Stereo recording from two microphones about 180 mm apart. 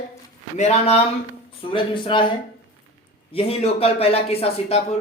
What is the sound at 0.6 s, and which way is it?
Speech, 35° left (ahead or behind).